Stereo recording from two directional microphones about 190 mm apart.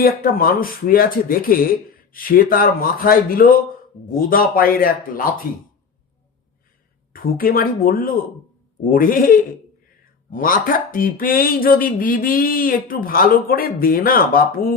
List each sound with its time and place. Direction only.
0.0 s speech: 50° left (ahead or behind)
7.1 s speech: 50° left (ahead or behind)